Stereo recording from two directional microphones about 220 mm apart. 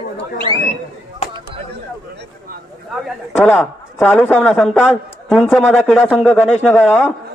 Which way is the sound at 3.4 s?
5° left (ahead or behind).